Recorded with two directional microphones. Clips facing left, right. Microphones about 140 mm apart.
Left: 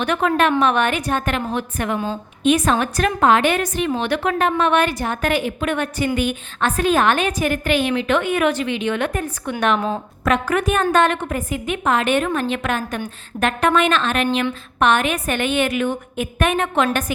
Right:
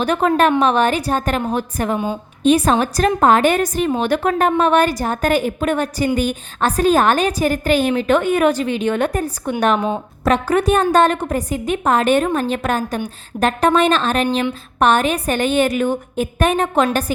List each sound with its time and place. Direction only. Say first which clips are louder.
0.0 s a woman's voice: right 3 dB; 35° right (ahead or behind)